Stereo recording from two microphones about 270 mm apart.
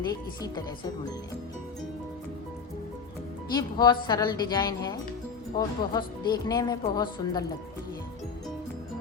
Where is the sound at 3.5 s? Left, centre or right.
Centre.